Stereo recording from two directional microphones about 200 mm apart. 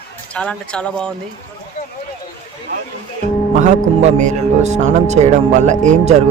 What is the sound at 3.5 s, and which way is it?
A man's voice, 35° right (ahead or behind).